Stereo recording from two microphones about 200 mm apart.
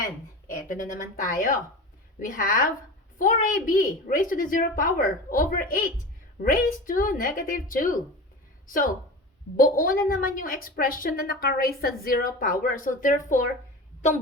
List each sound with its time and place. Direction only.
1.2 s a woman's voice: 45° left (ahead or behind)